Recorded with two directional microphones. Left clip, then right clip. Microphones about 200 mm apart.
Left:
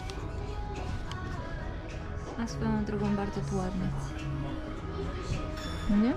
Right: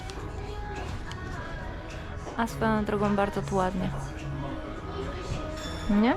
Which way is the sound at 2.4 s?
15° left (ahead or behind).